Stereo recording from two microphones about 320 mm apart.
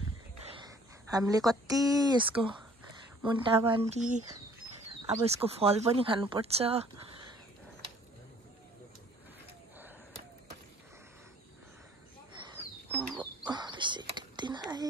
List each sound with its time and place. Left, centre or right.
0.6 s speech: centre
5.2 s speech: centre
12.9 s frog: centre
13.5 s whispering: centre